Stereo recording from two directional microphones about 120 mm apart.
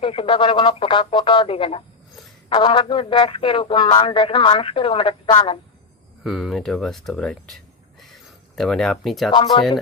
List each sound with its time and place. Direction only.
0.0 s speech: 50° left (ahead or behind)
6.2 s speech: centre (ahead or behind)
7.9 s a sound: centre (ahead or behind)